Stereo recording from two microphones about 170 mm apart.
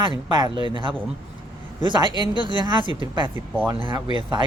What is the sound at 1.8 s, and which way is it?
Speech, 25° right (ahead or behind).